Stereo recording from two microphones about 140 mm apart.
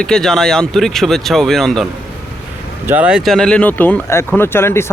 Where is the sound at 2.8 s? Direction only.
10° right (ahead or behind).